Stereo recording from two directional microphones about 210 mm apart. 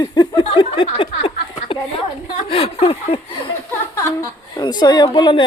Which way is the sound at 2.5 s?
25° left (ahead or behind).